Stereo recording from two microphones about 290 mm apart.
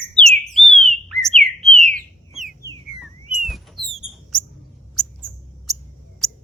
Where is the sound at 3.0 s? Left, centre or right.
Centre.